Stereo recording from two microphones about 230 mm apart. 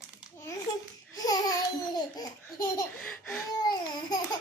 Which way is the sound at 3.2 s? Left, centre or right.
Centre.